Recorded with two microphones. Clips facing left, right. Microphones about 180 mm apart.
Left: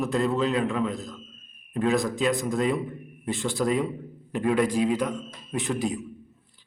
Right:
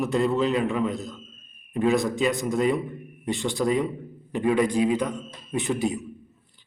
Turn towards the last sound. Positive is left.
turn(degrees=0)  # may be behind; listen again after turning